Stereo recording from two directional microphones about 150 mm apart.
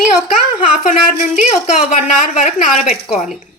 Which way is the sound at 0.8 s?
50° left (ahead or behind).